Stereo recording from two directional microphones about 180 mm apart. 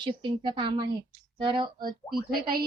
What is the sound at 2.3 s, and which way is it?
Speech, 55° right (ahead or behind).